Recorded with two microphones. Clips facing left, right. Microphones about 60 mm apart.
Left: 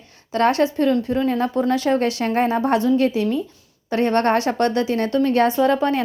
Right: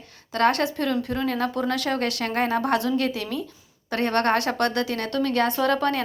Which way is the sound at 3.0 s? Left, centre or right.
Right.